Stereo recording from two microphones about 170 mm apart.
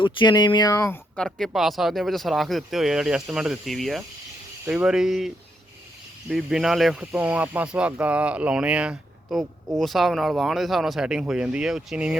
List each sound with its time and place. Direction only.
0.0 s speech: 25° left (ahead or behind)
1.1 s speech: 5° left (ahead or behind)